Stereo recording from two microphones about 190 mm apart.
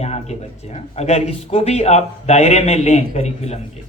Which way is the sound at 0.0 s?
35° left (ahead or behind).